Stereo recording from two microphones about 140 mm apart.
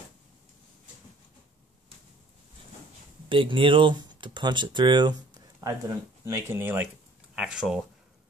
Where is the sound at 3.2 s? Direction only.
35° right (ahead or behind); by 6.9 s 15° right (ahead or behind).